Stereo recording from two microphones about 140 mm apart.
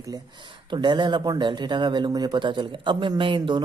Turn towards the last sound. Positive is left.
turn(degrees=-35)  # may be behind; listen again after turning